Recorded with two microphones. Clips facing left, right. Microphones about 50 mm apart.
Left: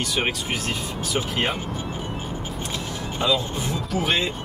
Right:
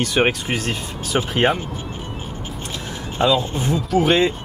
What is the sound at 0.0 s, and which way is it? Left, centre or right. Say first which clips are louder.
Speech: right 7 dB; right.